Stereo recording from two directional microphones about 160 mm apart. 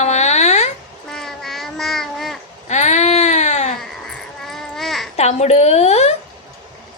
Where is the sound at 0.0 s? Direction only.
45° left (ahead or behind).